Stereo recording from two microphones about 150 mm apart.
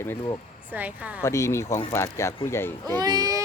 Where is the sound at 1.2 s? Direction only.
20° left (ahead or behind).